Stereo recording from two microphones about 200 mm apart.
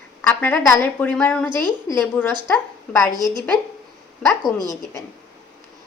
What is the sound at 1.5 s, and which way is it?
Speech, 20° right (ahead or behind).